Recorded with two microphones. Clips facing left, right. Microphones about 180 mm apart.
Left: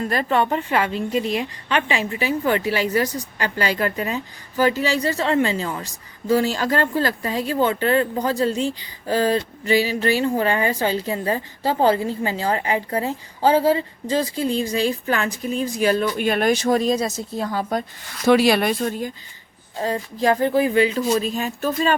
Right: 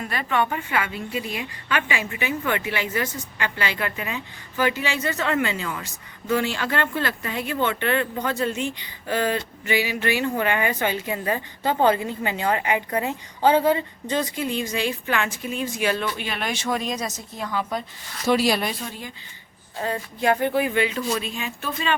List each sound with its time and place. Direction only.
0.0 s a woman's voice: 35° left (ahead or behind)
0.9 s a woman's voice: 5° right (ahead or behind)
1.7 s a woman's voice: 35° left (ahead or behind)
18.3 s speech: 60° left (ahead or behind); by 19.1 s 45° left (ahead or behind)
19.8 s a woman's voice: 35° left (ahead or behind)